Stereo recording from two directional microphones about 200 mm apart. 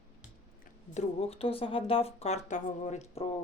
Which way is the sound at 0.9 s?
30° left (ahead or behind).